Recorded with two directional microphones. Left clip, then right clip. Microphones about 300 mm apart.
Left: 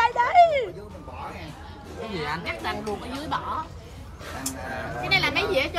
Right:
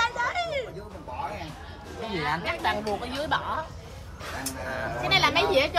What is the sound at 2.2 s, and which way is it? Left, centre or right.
Speech, right.